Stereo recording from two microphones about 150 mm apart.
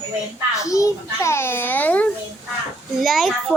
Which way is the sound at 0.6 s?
20° left (ahead or behind).